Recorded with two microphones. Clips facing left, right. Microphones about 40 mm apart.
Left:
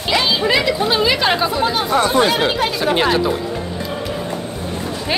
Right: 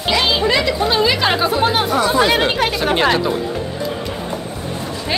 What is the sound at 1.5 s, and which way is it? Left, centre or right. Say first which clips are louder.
Speech: right 2 dB; right.